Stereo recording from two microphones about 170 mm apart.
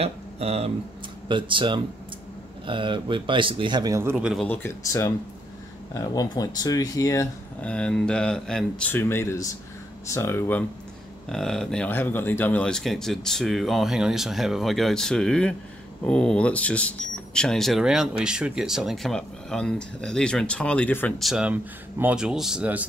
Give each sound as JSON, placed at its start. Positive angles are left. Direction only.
{"t": 0.0, "sound": "speech", "side_deg": -35}
{"t": 4.5, "sound": "speech", "side_deg": 15}
{"t": 7.6, "sound": "speech", "side_deg": 5}
{"t": 11.2, "sound": "speech", "side_deg": 5}
{"t": 21.2, "sound": "speech", "side_deg": -5}